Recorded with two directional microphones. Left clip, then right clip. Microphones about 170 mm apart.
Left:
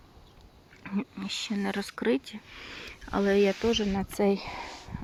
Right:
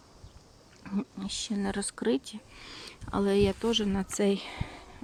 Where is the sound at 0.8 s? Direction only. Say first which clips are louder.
Left 1 dB; 10° right (ahead or behind).